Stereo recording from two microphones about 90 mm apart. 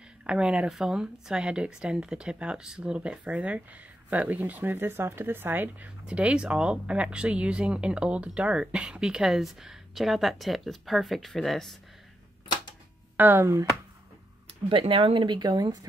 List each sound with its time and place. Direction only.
0.3 s speech: 10° right (ahead or behind)
6.0 s speech: 10° right (ahead or behind); by 11.7 s 5° left (ahead or behind)
13.2 s speech: 20° right (ahead or behind)
14.7 s speech: 80° right; by 15.8 s 50° right (ahead or behind)